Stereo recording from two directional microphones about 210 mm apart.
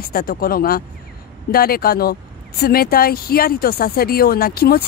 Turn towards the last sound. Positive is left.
turn(degrees=45)  # may be behind; listen again after turning